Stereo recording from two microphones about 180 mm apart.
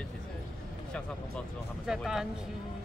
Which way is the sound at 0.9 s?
Centre (ahead or behind).